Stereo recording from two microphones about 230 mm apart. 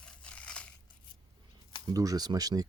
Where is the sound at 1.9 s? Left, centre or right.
Centre.